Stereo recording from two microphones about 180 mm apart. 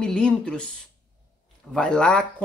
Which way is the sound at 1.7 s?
5° left (ahead or behind).